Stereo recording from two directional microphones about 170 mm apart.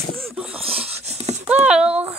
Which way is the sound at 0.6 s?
35° right (ahead or behind).